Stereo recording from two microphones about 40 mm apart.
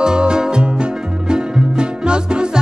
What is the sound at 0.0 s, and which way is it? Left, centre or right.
Music, centre.